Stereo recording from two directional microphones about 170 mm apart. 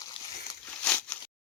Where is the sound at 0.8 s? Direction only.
10° left (ahead or behind).